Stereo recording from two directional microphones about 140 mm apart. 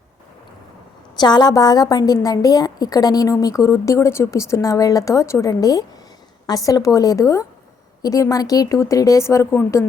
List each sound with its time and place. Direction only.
1.2 s a woman's voice: 30° left (ahead or behind)